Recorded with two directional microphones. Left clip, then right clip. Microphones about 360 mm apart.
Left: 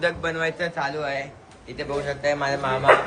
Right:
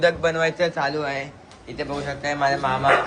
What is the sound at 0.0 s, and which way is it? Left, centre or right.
A man's voice, centre.